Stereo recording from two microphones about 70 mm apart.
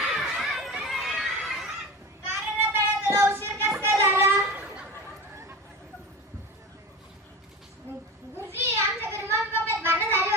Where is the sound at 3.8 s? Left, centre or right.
Right.